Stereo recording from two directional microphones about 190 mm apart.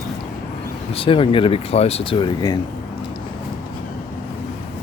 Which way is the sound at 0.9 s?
30° left (ahead or behind).